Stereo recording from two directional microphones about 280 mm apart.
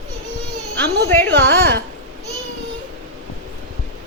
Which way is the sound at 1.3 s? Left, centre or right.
Right.